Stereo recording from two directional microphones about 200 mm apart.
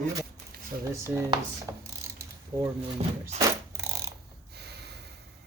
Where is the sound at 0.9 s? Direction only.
15° right (ahead or behind).